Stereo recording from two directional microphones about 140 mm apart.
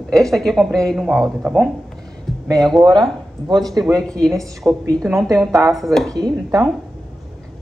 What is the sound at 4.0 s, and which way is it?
Speech, 5° left (ahead or behind).